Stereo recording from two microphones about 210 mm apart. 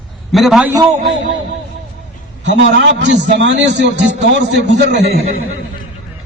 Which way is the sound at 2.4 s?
55° right (ahead or behind).